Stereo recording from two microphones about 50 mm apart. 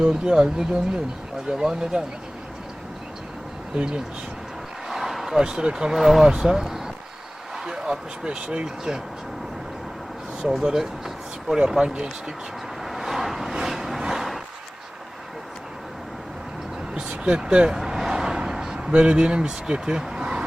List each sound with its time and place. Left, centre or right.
0.0 s speech: centre
3.8 s speech: centre
4.9 s a sound: centre
5.5 s speech: centre
5.9 s speech: centre
10.4 s speech: centre
12.8 s vehicle: centre
16.9 s vehicle: centre
17.7 s a sound: centre